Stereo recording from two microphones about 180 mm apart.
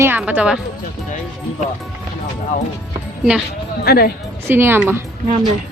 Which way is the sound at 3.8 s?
60° left (ahead or behind).